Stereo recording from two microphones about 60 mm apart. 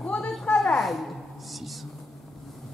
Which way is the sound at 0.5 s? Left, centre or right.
Centre.